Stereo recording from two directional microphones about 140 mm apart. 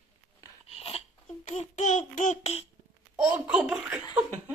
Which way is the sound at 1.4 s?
60° left (ahead or behind).